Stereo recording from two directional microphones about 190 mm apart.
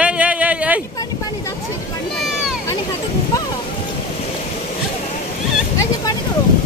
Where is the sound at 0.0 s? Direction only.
5° right (ahead or behind).